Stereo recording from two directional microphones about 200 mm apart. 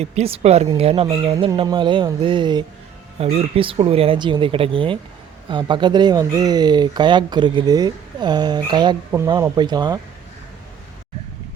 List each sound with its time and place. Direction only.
0.0 s speech: 30° right (ahead or behind)